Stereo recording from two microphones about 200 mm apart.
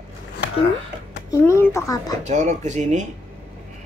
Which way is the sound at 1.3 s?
15° left (ahead or behind).